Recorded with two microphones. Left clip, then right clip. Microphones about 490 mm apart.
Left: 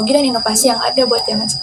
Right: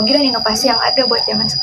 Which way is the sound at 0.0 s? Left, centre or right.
Right.